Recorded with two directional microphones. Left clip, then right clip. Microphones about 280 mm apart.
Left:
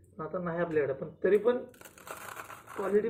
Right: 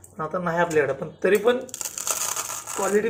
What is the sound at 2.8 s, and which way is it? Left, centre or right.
Speech, right.